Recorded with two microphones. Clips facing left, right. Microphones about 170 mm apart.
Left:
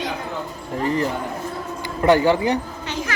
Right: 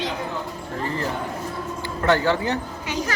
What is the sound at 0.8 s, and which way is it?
Speech, 15° left (ahead or behind).